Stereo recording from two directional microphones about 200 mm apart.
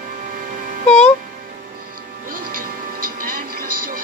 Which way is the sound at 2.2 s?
45° right (ahead or behind).